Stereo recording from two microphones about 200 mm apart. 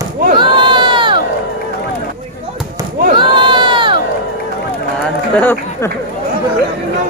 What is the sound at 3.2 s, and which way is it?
Crowd, 25° right (ahead or behind).